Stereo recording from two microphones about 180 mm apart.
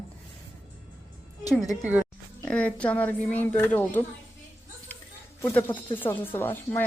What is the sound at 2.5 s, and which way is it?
Speech, 5° left (ahead or behind).